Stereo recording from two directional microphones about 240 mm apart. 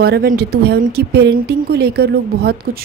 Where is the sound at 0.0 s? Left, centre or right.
Right.